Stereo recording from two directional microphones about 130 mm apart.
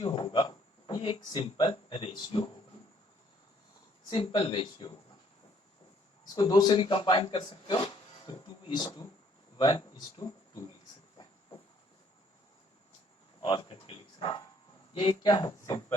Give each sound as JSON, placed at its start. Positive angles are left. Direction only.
{"t": 0.0, "sound": "a sound", "side_deg": 40}
{"t": 1.3, "sound": "speech", "side_deg": 45}
{"t": 4.1, "sound": "speech", "side_deg": 40}
{"t": 6.2, "sound": "speech", "side_deg": 35}
{"t": 8.3, "sound": "a sound", "side_deg": 35}
{"t": 9.6, "sound": "speech", "side_deg": 35}
{"t": 13.4, "sound": "bow-wow", "side_deg": 35}
{"t": 14.9, "sound": "speech", "side_deg": 35}